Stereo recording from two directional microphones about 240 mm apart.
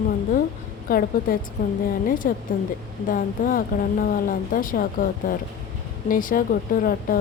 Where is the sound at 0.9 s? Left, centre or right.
Left.